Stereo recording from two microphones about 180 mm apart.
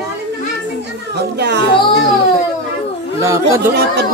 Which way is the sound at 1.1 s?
70° right (ahead or behind).